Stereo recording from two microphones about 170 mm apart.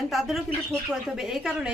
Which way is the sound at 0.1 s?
Centre (ahead or behind).